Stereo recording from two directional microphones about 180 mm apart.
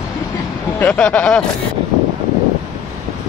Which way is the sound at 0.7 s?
5° left (ahead or behind).